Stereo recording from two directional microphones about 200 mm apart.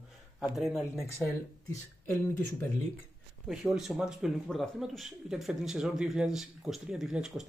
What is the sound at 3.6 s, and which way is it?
Speech, centre (ahead or behind).